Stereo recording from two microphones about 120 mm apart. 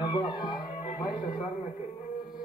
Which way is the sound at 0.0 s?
40° left (ahead or behind).